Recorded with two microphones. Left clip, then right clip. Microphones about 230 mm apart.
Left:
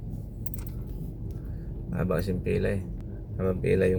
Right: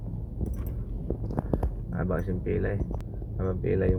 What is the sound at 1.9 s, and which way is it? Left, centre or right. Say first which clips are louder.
Speech: left 3 dB; centre.